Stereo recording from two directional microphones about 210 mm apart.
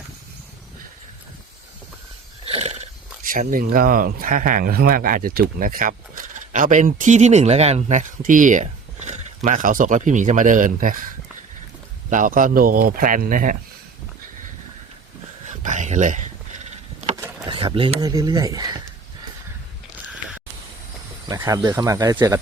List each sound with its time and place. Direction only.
2.4 s speech: 30° right (ahead or behind)
12.1 s speech: 40° right (ahead or behind)
15.4 s a sound: 35° right (ahead or behind)
17.5 s speech: 25° right (ahead or behind)
21.2 s speech: 15° right (ahead or behind)